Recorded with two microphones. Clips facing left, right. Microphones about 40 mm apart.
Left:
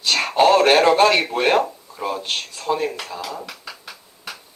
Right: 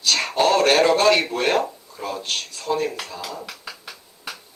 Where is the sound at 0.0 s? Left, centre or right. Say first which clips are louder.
Left 3 dB; centre.